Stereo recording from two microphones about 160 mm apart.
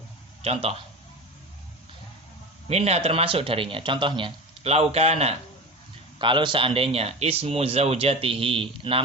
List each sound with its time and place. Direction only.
0.4 s speech: 40° right (ahead or behind)
2.6 s speech: 40° right (ahead or behind)